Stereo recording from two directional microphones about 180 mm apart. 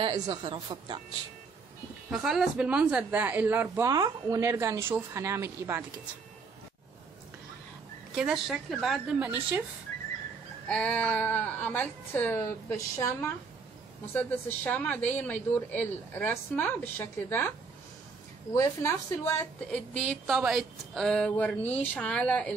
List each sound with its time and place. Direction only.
0.0 s a woman's voice: 25° right (ahead or behind)
2.0 s speech: 5° right (ahead or behind)
8.1 s a woman's voice: 5° right (ahead or behind)
10.7 s speech: 5° left (ahead or behind)
18.5 s speech: 15° left (ahead or behind)